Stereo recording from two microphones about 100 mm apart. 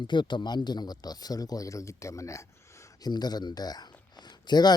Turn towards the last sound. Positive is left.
turn(degrees=45)  # may be behind; listen again after turning